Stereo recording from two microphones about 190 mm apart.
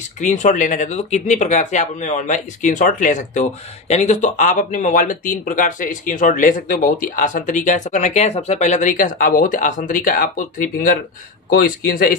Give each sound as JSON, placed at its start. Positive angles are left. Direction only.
{"t": 0.2, "sound": "speech", "side_deg": 40}